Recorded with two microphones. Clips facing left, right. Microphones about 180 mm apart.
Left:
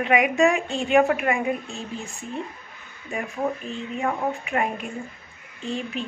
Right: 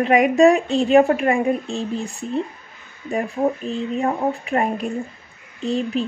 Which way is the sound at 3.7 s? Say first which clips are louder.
Right 5 dB; 35° right (ahead or behind).